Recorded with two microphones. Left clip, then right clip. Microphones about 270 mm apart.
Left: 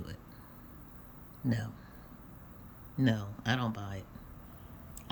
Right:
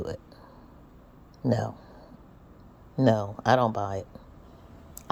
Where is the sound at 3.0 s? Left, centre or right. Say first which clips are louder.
Right 10 dB; centre.